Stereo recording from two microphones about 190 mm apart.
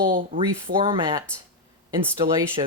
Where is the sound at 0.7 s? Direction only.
25° right (ahead or behind).